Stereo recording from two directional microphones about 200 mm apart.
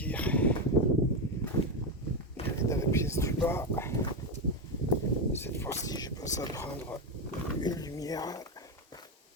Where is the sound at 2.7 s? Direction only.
15° left (ahead or behind).